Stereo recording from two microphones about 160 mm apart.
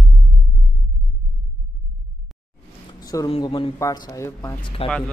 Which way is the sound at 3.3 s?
30° left (ahead or behind).